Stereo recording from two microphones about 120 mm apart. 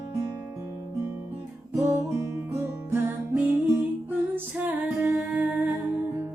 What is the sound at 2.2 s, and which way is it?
Music, 20° right (ahead or behind).